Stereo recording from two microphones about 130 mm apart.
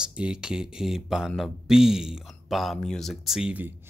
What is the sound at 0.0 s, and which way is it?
Speech, 10° right (ahead or behind).